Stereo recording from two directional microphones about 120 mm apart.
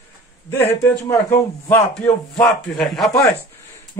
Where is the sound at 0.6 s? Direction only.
20° left (ahead or behind).